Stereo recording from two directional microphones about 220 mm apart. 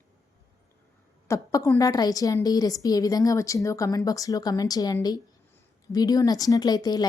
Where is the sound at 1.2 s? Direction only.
15° left (ahead or behind).